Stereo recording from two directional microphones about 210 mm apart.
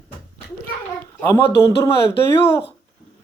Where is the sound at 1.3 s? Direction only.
15° left (ahead or behind).